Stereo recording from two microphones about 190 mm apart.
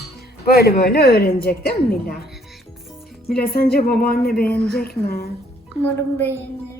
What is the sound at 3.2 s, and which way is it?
Speech, 55° left (ahead or behind).